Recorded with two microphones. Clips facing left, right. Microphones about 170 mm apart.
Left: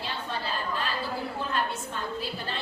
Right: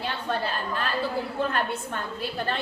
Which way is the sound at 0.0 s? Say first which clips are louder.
Right 5 dB; 60° right (ahead or behind).